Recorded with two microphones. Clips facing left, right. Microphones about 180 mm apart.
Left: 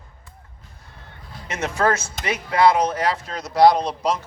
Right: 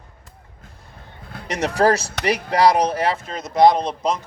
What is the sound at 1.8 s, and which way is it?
Speech, 35° right (ahead or behind).